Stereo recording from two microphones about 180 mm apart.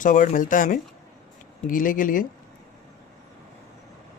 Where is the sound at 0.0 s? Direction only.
45° left (ahead or behind).